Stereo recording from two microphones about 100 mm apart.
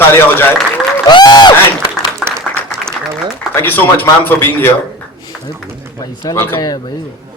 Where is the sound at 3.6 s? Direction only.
20° left (ahead or behind).